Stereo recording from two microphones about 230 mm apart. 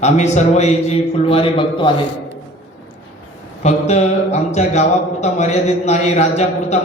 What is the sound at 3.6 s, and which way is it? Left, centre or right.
Speech, left.